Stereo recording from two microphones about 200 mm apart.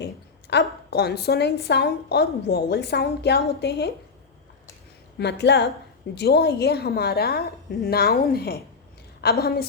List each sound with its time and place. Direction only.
0.5 s a woman's voice: 55° left (ahead or behind)
5.1 s a woman's voice: 60° left (ahead or behind)